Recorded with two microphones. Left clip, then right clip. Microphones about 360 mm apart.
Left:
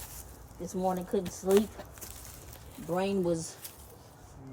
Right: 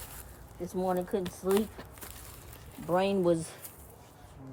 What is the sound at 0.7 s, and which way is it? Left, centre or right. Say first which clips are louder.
Speech: even; centre.